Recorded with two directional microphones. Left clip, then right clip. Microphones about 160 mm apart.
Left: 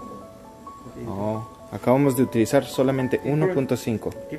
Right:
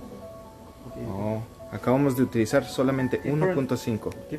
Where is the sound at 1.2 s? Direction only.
30° left (ahead or behind).